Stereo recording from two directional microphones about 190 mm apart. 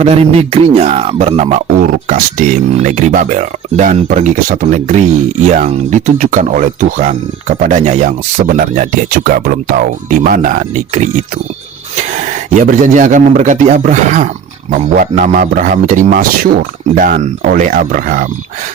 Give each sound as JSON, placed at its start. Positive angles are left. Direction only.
{"t": 0.0, "sound": "a man's voice", "side_deg": -30}
{"t": 12.5, "sound": "a man's voice", "side_deg": -40}